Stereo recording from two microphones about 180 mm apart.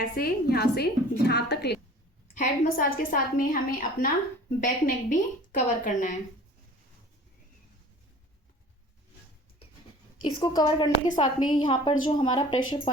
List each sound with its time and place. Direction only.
0.0 s a woman's voice: 55° left (ahead or behind)
2.3 s a woman's voice: 45° left (ahead or behind)
10.4 s a woman's voice: 25° left (ahead or behind)